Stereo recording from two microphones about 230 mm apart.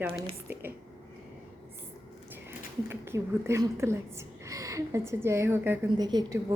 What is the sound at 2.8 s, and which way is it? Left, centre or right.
A woman's voice, centre.